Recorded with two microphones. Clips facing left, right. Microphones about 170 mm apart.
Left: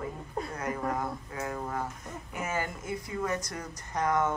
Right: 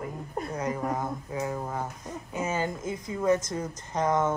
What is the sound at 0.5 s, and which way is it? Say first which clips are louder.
Speech: right 3 dB; 20° right (ahead or behind).